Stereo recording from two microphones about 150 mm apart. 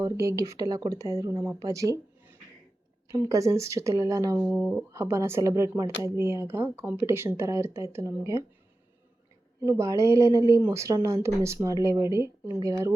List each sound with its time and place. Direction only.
0.0 s speech: 20° right (ahead or behind)
3.1 s speech: 20° right (ahead or behind)
4.5 s speech: centre (ahead or behind)
4.9 s speech: 20° right (ahead or behind)
9.6 s speech: 20° right (ahead or behind)